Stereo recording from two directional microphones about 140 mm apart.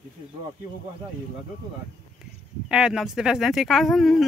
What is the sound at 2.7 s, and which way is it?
Speech, 5° right (ahead or behind).